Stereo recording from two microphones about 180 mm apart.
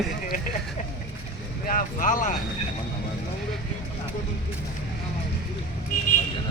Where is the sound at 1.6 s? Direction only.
50° left (ahead or behind).